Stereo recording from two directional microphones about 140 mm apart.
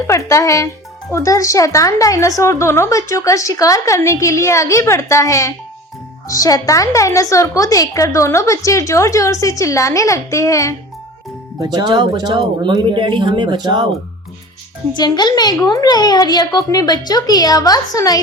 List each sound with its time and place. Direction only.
0.1 s speech: 20° left (ahead or behind)
11.6 s speech: 30° right (ahead or behind)
14.9 s speech: 30° left (ahead or behind)